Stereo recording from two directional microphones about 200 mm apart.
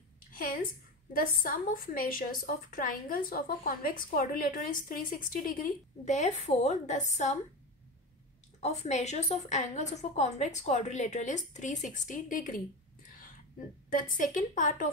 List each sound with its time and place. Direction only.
0.3 s a woman's voice: 45° left (ahead or behind)
8.5 s a woman's voice: 35° left (ahead or behind)
13.8 s a woman's voice: 40° left (ahead or behind)